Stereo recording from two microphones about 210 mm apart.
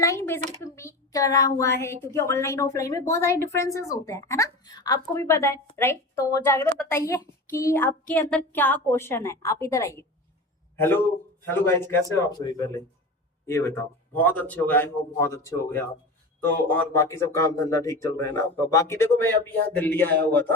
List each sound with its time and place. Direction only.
0.0 s a woman's voice: 15° left (ahead or behind)